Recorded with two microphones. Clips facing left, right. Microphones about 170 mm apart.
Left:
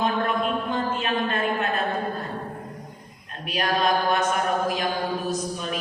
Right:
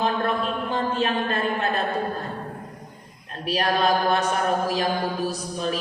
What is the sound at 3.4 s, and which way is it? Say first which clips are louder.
Mantra: right 2 dB; 35° right (ahead or behind).